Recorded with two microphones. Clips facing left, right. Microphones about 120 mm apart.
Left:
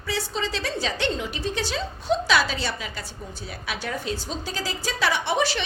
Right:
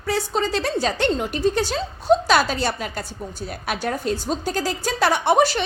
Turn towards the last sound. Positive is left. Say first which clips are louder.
# right 6 dB
turn(degrees=-45)  # may be behind; listen again after turning